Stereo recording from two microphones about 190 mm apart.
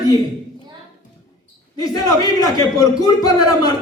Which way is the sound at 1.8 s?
20° left (ahead or behind).